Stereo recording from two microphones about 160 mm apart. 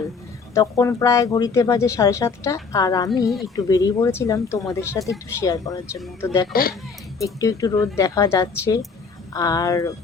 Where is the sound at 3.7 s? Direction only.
20° left (ahead or behind).